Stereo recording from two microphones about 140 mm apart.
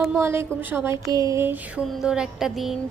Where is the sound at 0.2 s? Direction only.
20° right (ahead or behind).